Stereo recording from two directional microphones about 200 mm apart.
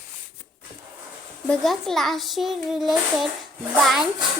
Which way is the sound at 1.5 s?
Centre (ahead or behind).